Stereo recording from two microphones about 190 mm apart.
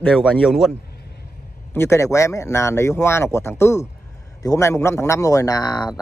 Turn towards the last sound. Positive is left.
turn(degrees=20)  # may be behind; listen again after turning